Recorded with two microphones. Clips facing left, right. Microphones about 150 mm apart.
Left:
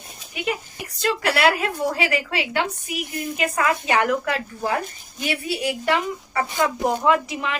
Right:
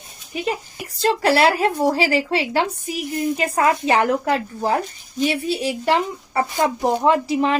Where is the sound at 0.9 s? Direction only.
30° right (ahead or behind).